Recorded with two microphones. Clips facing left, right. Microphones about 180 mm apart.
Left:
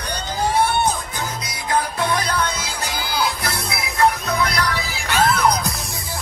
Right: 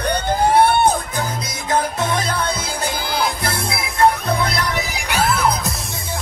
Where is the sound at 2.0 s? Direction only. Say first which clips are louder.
Even; 25° right (ahead or behind).